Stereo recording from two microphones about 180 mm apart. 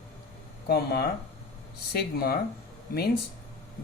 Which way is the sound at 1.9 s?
60° left (ahead or behind).